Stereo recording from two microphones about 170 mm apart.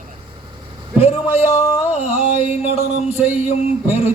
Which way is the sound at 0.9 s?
35° left (ahead or behind).